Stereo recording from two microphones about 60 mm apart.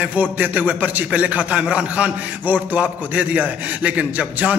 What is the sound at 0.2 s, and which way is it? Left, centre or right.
A man's voice, right.